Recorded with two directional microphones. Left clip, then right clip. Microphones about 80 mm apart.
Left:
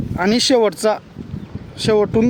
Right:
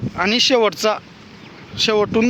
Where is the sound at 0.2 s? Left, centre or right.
Left.